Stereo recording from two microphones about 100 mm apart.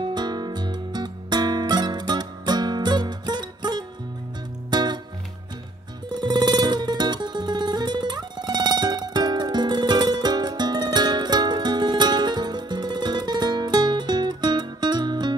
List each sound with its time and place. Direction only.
0.0 s music: 45° right (ahead or behind)
6.1 s music: 45° right (ahead or behind)